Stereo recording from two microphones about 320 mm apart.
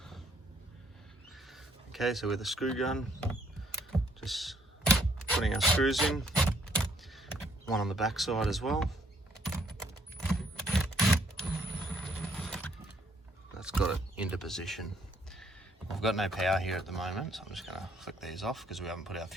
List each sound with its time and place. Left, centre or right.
1.5 s speech: centre
4.2 s computer keyboard: centre
6.7 s a sound: centre
10.9 s a sound: centre
11.9 s mechanisms: centre
13.6 s speech: centre
15.9 s speech: centre